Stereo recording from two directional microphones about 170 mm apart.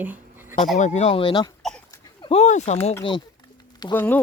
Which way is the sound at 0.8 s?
40° left (ahead or behind).